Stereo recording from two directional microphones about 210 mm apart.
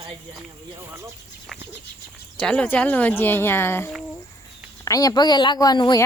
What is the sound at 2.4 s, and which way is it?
A woman's voice, 5° left (ahead or behind).